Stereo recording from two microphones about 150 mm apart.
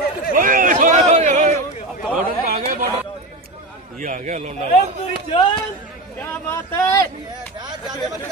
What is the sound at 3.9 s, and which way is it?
Speech, 65° right (ahead or behind).